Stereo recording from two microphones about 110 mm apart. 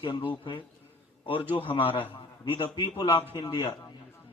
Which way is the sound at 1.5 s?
50° left (ahead or behind).